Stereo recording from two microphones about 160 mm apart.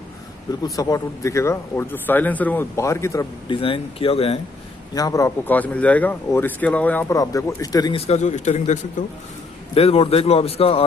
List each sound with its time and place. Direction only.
0.7 s speech: 20° left (ahead or behind)
3.5 s a man's voice: 35° left (ahead or behind)
4.9 s speech: 20° left (ahead or behind)
7.2 s speech: 20° left (ahead or behind)
7.9 s speech: 45° left (ahead or behind)
9.8 s a man's voice: 40° left (ahead or behind)